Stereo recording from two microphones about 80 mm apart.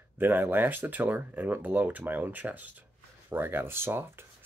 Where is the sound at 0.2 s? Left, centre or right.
Right.